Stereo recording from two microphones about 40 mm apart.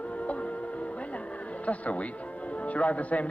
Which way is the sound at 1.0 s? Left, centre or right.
Left.